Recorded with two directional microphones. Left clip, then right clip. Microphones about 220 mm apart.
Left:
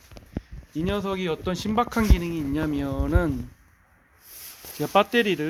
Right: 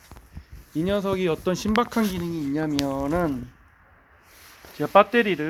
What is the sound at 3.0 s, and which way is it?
Speech, 25° left (ahead or behind).